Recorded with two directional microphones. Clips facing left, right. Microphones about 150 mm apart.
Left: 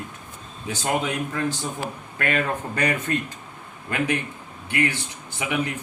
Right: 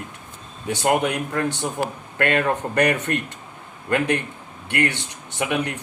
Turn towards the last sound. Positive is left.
turn(degrees=-70)  # may be behind; listen again after turning